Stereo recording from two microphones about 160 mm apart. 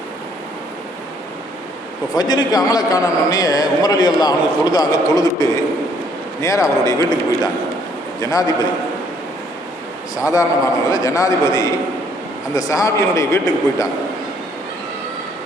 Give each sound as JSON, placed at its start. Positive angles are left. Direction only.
{"t": 2.1, "sound": "a man's voice", "side_deg": 25}
{"t": 10.2, "sound": "a man's voice", "side_deg": 20}